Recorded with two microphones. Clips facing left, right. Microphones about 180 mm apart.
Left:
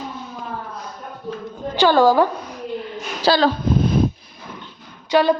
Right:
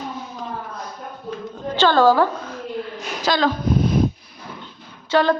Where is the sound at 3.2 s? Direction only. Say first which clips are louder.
Left 3 dB; 35° left (ahead or behind).